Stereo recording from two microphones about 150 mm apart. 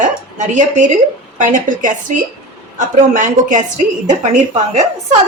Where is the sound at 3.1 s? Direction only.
60° right (ahead or behind).